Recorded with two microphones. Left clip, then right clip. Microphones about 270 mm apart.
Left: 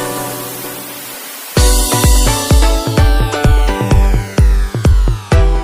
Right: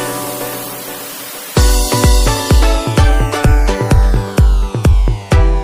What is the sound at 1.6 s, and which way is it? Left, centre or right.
Music, centre.